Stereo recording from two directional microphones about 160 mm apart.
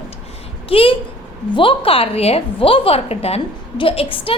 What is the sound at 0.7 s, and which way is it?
A woman's voice, 35° left (ahead or behind).